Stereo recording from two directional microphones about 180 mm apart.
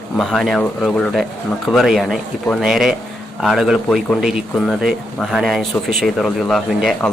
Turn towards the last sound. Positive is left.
turn(degrees=0)  # may be behind; listen again after turning